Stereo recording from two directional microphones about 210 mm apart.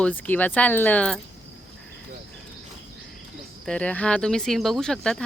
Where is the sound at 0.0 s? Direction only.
10° left (ahead or behind).